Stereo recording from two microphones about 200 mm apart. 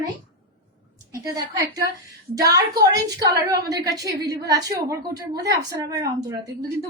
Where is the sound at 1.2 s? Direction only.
15° right (ahead or behind).